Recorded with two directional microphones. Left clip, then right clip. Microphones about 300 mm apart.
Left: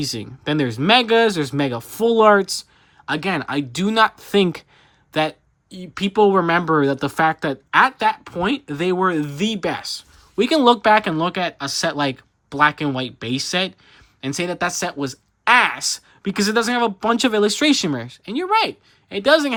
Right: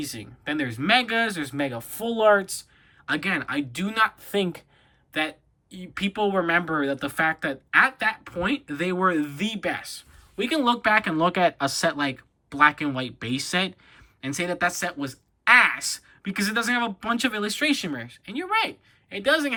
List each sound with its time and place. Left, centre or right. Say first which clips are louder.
0.4 s speech: left 6 dB; centre
3.1 s speech: left 4 dB; centre
5.1 s speech: left 7 dB; centre